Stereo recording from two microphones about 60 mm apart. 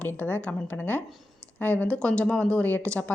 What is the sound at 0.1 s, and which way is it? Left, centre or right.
A woman's voice, left.